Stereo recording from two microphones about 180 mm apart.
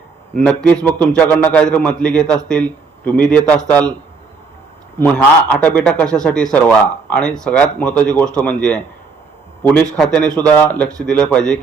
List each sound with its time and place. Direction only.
0.4 s a man's voice: 10° left (ahead or behind)
4.9 s a man's voice: 5° left (ahead or behind)
10.0 s a man's voice: 5° left (ahead or behind)